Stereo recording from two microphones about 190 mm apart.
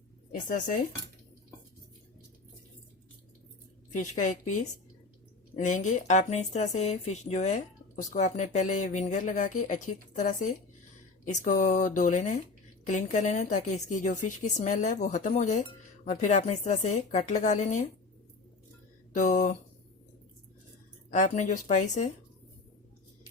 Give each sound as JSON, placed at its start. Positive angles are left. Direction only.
{"t": 0.3, "sound": "speech", "side_deg": 45}
{"t": 3.9, "sound": "a woman's voice", "side_deg": 40}
{"t": 5.5, "sound": "a woman's voice", "side_deg": 40}
{"t": 19.1, "sound": "a woman's voice", "side_deg": 40}
{"t": 21.1, "sound": "a woman's voice", "side_deg": 40}